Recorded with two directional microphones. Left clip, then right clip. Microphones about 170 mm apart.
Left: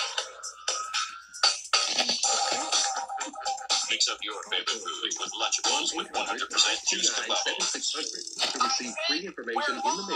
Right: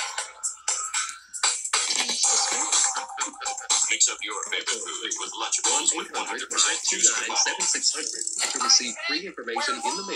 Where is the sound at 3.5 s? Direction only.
30° left (ahead or behind).